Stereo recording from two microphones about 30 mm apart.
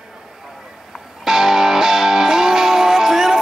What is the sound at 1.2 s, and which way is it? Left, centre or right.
Music, centre.